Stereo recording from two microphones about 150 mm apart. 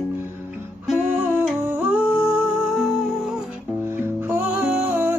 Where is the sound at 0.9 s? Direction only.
10° right (ahead or behind).